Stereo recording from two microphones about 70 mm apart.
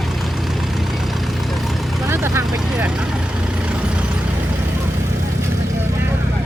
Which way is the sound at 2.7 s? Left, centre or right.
Centre.